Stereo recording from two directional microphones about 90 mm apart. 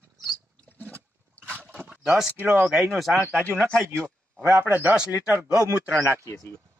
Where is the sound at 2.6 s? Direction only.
5° right (ahead or behind).